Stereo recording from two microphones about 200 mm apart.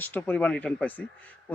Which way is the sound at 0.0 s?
10° left (ahead or behind).